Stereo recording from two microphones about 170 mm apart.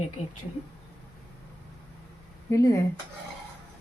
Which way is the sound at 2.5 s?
20° left (ahead or behind).